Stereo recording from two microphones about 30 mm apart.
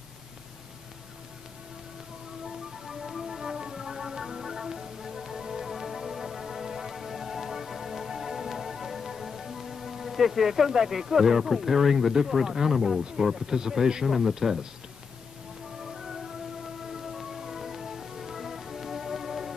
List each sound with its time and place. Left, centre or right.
2.4 s music: centre
12.4 s a man's voice: centre
15.8 s music: centre